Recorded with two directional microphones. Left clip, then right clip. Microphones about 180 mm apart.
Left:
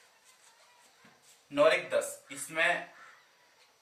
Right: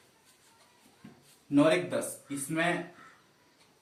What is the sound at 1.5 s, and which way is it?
Speech, 10° left (ahead or behind).